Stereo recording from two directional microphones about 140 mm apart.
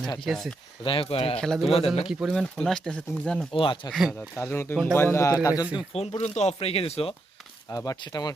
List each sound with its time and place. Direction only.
0.3 s speech: centre (ahead or behind)
0.9 s speech: 40° left (ahead or behind)
1.4 s speech: 5° left (ahead or behind)
1.6 s speech: 45° left (ahead or behind)
2.0 s speech: centre (ahead or behind)
3.5 s speech: 40° left (ahead or behind)
3.9 s speech: centre (ahead or behind)
4.4 s a man's voice: 20° left (ahead or behind)
5.9 s speech: 45° left (ahead or behind)
7.7 s a man's voice: 25° left (ahead or behind)